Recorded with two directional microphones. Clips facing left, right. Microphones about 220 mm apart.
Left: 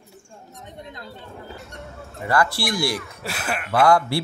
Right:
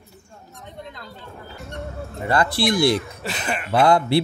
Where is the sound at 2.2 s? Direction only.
20° right (ahead or behind).